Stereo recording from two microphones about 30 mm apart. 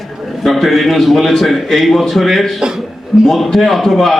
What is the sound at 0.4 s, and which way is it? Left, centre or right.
A man's voice, centre.